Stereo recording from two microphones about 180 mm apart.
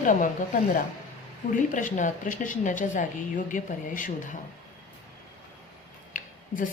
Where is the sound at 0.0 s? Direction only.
45° left (ahead or behind).